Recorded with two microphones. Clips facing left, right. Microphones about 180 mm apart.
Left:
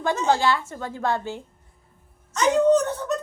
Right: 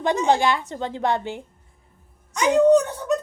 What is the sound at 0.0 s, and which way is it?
A woman's voice, 20° right (ahead or behind).